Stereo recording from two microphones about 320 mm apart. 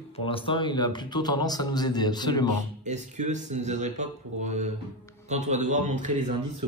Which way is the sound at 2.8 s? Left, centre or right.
Right.